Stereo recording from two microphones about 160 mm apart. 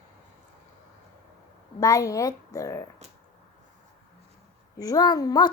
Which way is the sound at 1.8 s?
20° left (ahead or behind).